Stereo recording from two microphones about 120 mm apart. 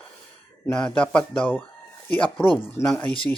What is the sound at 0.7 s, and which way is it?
Speech, 10° left (ahead or behind).